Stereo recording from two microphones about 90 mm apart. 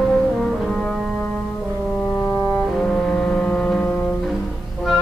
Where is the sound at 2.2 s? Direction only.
35° left (ahead or behind).